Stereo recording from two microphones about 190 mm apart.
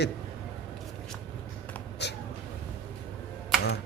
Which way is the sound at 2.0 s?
60° left (ahead or behind).